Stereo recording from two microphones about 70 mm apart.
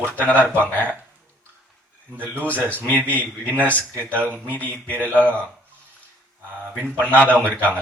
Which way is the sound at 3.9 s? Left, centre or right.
Right.